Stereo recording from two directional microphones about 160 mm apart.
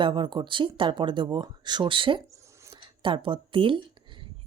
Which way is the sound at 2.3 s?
20° right (ahead or behind).